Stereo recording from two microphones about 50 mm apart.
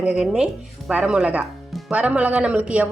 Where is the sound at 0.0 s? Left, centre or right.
Centre.